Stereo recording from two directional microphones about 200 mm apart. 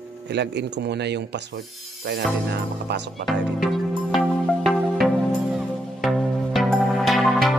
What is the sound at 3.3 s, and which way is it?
Music, centre (ahead or behind).